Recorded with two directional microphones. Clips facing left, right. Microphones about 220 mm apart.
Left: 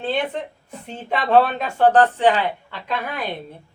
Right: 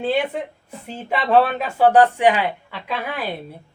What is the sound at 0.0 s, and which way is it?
Speech, 10° right (ahead or behind).